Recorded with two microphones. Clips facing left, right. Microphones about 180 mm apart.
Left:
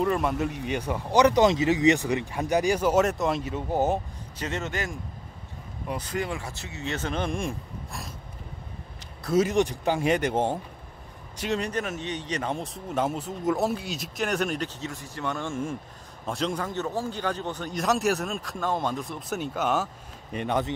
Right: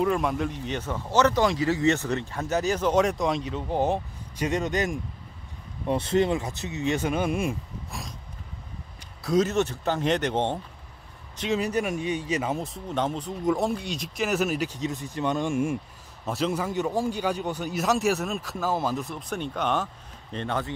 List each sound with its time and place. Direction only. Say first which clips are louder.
0.0 s speech: even; centre (ahead or behind)
4.4 s speech: right 5 dB; 15° right (ahead or behind)
9.2 s a man's voice: even; 5° left (ahead or behind)